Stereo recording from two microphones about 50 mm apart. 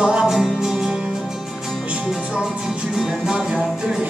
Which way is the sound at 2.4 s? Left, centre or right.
Centre.